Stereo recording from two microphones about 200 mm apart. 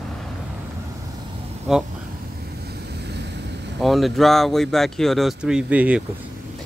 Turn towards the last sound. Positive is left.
turn(degrees=-5)  # may be behind; listen again after turning